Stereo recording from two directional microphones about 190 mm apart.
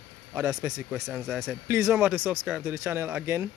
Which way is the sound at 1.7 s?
15° right (ahead or behind).